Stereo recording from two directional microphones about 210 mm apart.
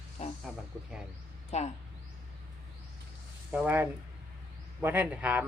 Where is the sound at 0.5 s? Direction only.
Centre (ahead or behind).